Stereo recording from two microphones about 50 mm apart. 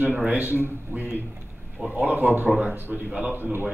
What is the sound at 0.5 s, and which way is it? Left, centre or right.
Speech, right.